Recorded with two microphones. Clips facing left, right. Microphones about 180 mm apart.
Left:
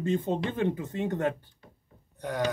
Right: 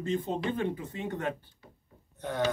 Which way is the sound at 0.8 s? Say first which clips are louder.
Left 5 dB; 45° left (ahead or behind).